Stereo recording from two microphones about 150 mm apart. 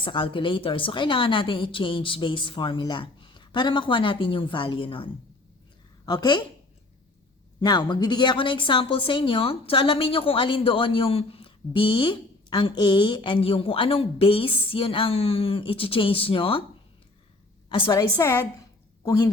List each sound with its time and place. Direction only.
0.0 s a woman's voice: 35° left (ahead or behind)
6.1 s a woman's voice: 30° left (ahead or behind)
7.6 s a woman's voice: 30° left (ahead or behind)
17.7 s a woman's voice: 35° left (ahead or behind)
18.2 s a woman's voice: 15° left (ahead or behind)